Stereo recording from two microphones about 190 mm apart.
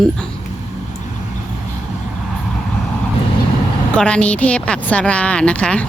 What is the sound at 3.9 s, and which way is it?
A woman's voice, 5° left (ahead or behind).